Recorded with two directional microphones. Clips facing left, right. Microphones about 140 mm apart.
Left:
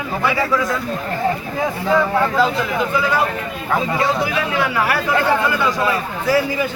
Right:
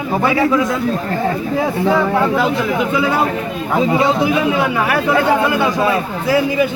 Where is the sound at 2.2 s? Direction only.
15° right (ahead or behind).